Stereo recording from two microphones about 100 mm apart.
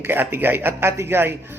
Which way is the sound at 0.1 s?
20° right (ahead or behind).